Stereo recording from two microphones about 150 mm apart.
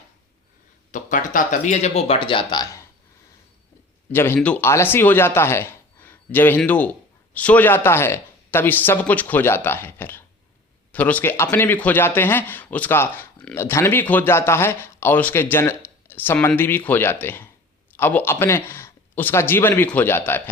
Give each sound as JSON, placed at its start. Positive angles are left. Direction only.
{"t": 0.9, "sound": "speech", "side_deg": 55}
{"t": 4.1, "sound": "speech", "side_deg": 15}